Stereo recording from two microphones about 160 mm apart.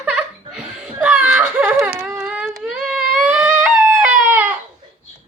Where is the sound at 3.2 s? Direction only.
10° right (ahead or behind).